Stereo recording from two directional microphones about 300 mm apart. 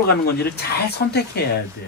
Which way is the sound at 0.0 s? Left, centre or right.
Left.